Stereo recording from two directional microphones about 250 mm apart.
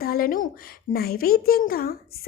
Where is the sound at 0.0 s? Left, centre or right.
Left.